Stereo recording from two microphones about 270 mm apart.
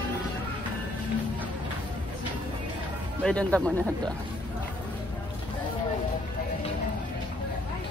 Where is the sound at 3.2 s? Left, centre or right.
Centre.